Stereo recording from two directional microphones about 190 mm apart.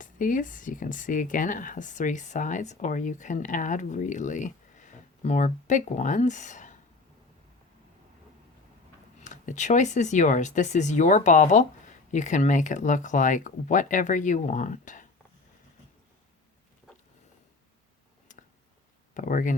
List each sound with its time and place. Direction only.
0.0 s speech: 45° left (ahead or behind)
9.2 s speech: 40° left (ahead or behind)
19.1 s speech: 45° left (ahead or behind)